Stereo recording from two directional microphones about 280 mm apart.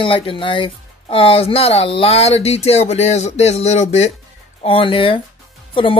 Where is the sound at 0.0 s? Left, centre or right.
Centre.